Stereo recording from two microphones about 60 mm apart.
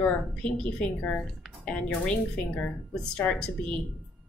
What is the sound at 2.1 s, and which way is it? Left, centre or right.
Speech, centre.